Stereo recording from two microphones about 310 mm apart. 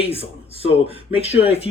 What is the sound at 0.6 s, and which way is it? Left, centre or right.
Speech, centre.